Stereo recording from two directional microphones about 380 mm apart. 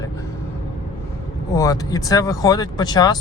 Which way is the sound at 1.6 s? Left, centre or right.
Centre.